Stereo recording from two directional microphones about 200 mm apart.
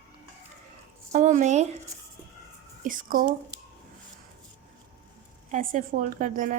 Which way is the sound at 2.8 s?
40° right (ahead or behind).